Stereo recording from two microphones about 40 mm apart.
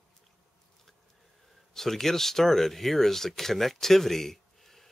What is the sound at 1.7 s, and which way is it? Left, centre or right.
Speech, centre.